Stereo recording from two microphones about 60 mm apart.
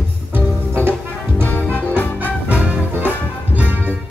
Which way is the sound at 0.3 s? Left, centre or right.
Right.